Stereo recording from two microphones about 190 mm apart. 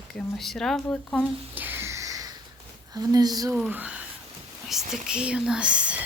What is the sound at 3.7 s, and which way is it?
Speech, 10° right (ahead or behind).